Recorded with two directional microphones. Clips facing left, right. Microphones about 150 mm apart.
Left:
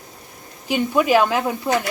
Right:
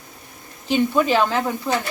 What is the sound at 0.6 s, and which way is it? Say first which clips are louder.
Speech: even; 10° left (ahead or behind).